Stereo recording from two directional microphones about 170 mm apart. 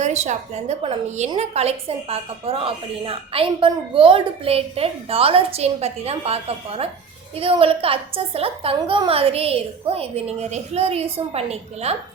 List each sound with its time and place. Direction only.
0.0 s a woman's voice: 40° right (ahead or behind)